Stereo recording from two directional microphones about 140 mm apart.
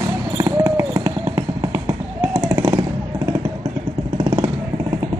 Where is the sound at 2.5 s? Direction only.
35° right (ahead or behind).